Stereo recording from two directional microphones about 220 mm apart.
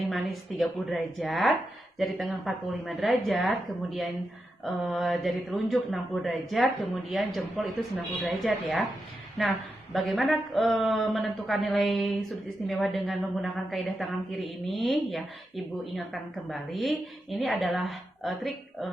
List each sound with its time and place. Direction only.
0.1 s a woman's voice: centre (ahead or behind)